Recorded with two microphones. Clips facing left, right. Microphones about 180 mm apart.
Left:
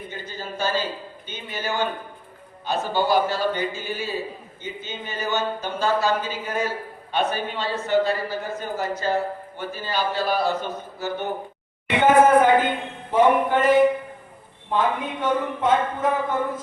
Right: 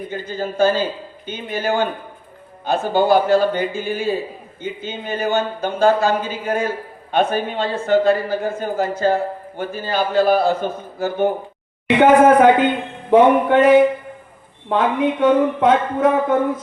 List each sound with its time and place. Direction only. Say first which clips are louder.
0.1 s speech: right 9 dB; 55° right (ahead or behind)
11.9 s speech: right 4 dB; 70° right (ahead or behind)